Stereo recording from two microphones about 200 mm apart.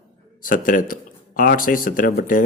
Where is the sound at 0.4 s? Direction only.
40° left (ahead or behind).